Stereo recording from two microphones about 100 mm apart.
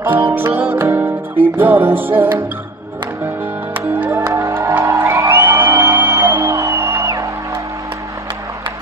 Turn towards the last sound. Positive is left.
turn(degrees=-30)  # may be behind; listen again after turning